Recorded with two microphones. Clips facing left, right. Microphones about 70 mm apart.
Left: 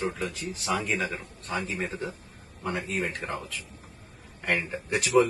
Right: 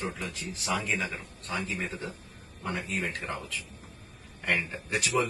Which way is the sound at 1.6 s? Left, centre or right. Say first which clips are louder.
Left 2 dB; left.